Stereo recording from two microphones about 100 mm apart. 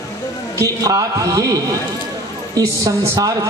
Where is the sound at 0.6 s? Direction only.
35° right (ahead or behind).